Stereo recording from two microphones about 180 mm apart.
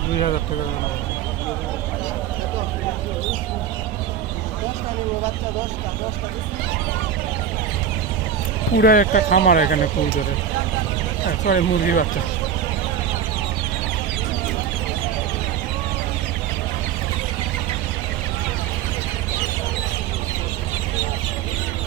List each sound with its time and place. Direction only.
8.8 s speech: 50° left (ahead or behind)
11.3 s speech: 55° left (ahead or behind)